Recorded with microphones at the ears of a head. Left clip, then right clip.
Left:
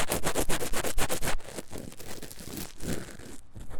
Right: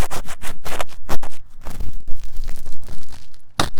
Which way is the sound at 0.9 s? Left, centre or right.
Left.